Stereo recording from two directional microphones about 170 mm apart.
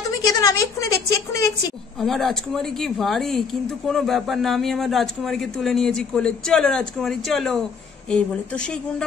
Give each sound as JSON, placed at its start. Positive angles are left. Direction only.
{"t": 0.2, "sound": "a woman's voice", "side_deg": 20}
{"t": 2.0, "sound": "speech", "side_deg": 0}